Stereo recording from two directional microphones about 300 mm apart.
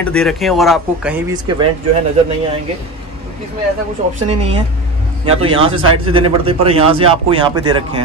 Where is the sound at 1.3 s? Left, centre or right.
Centre.